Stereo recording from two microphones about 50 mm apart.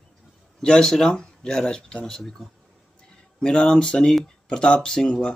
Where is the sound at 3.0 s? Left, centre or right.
Centre.